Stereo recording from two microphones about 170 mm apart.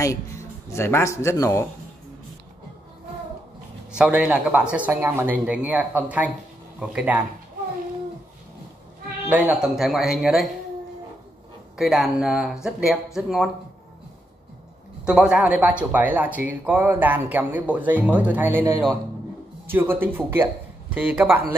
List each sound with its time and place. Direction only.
0.7 s speech: 15° left (ahead or behind)
3.9 s speech: 5° right (ahead or behind)
9.3 s speech: 10° right (ahead or behind)
11.7 s speech: centre (ahead or behind)
15.0 s speech: 5° right (ahead or behind)
19.7 s speech: 10° right (ahead or behind)